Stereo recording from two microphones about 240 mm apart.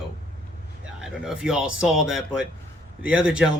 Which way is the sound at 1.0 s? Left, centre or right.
Centre.